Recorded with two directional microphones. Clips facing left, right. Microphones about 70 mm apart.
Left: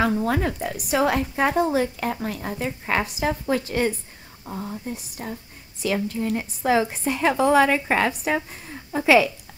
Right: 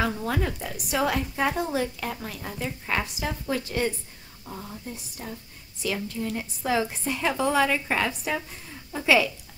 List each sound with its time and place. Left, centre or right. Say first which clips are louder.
0.0 s a woman's voice: left 5 dB; left
5.2 s a woman's voice: left 4 dB; left